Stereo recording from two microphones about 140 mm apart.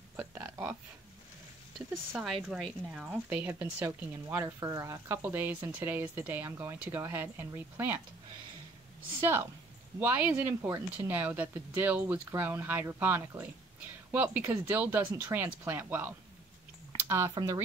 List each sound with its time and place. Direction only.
0.1 s a sound: 15° right (ahead or behind)
2.1 s speech: 5° right (ahead or behind)
9.2 s speech: 15° right (ahead or behind)
17.3 s speech: 30° right (ahead or behind)